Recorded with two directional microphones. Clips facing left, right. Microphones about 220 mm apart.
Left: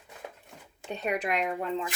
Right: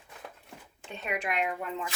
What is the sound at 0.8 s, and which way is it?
Speech, 40° left (ahead or behind).